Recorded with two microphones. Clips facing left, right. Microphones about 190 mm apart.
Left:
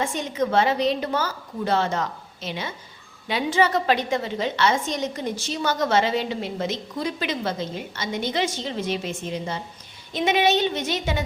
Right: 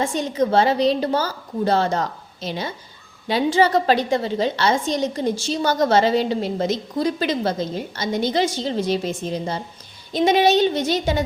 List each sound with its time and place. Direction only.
0.0 s a woman's voice: 35° right (ahead or behind)